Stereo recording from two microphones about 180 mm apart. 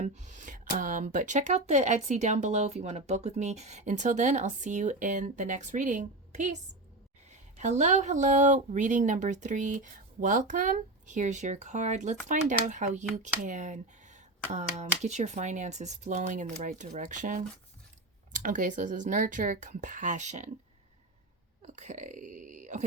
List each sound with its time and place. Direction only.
0.0 s speech: 40° right (ahead or behind)
21.6 s speech: 40° right (ahead or behind)